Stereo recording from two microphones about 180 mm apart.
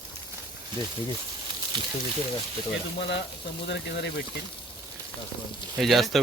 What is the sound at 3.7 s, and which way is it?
Speech, 75° left (ahead or behind).